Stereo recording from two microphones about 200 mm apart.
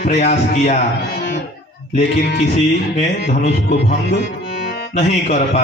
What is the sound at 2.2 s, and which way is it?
Music, 55° left (ahead or behind).